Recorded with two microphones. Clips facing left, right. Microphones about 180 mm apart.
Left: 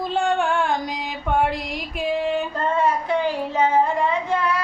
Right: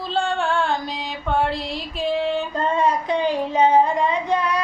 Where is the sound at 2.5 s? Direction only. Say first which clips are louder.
Right 1 dB; 20° right (ahead or behind).